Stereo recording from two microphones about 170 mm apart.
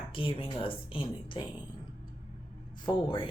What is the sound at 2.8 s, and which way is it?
Speech, 30° left (ahead or behind).